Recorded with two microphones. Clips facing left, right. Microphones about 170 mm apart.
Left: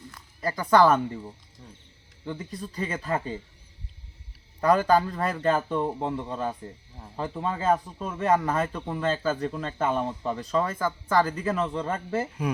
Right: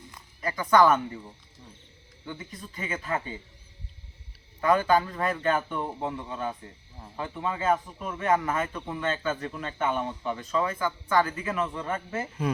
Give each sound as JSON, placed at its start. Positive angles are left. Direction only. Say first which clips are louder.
{"t": 0.4, "sound": "speech", "louder": "left 1 dB", "side_deg": 35}
{"t": 2.2, "sound": "speech", "louder": "left 5 dB", "side_deg": 35}
{"t": 4.6, "sound": "speech", "louder": "left 2 dB", "side_deg": 35}